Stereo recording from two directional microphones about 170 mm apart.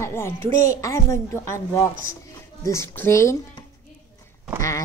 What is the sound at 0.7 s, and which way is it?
Speech, 20° left (ahead or behind).